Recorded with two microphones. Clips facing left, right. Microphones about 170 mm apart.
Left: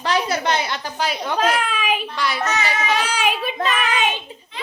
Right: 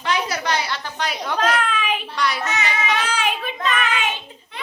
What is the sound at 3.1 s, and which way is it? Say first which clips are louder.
Speech: left 2 dB; 10° left (ahead or behind).